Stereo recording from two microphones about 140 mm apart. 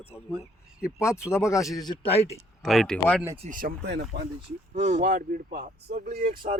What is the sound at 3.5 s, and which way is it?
Speech, 90° right.